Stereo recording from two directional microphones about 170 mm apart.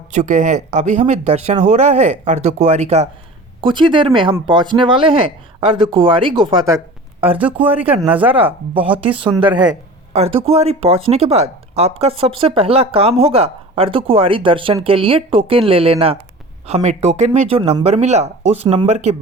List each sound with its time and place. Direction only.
0.1 s speech: 45° right (ahead or behind)
3.6 s speech: 30° right (ahead or behind)
6.7 s speech: 15° right (ahead or behind)
9.1 s speech: 30° right (ahead or behind)
10.1 s speech: 35° right (ahead or behind)